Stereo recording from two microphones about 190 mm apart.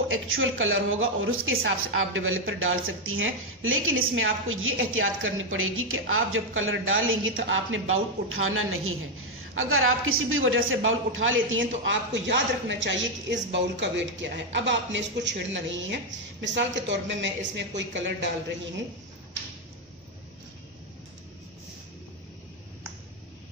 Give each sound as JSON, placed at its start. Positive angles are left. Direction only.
{"t": 0.1, "sound": "a woman's voice", "side_deg": -90}